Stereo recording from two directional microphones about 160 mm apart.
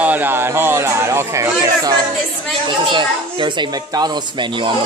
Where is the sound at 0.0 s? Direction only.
10° right (ahead or behind).